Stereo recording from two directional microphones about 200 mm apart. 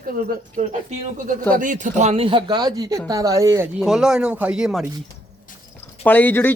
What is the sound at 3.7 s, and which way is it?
Speech, centre (ahead or behind).